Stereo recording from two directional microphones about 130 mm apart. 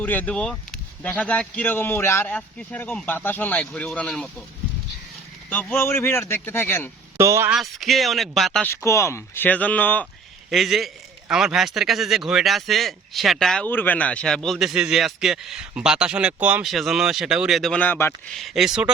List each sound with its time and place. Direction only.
0.0 s speech: 15° left (ahead or behind)
5.5 s speech: 15° left (ahead or behind)
7.2 s speech: 20° right (ahead or behind)
7.5 s a man's voice: centre (ahead or behind)
8.6 s speech: 20° left (ahead or behind)
10.5 s a man's voice: centre (ahead or behind)
13.7 s a man's voice: 15° left (ahead or behind); by 16.6 s 10° right (ahead or behind)
16.6 s a man's voice: centre (ahead or behind); by 18.1 s 15° left (ahead or behind)
18.3 s a man's voice: centre (ahead or behind)